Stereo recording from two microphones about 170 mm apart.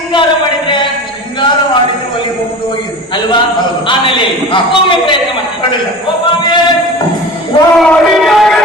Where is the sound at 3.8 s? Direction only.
30° left (ahead or behind).